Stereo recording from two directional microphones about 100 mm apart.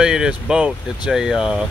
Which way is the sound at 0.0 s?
5° right (ahead or behind).